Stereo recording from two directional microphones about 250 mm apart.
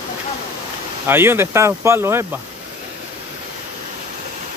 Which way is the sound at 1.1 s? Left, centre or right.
Centre.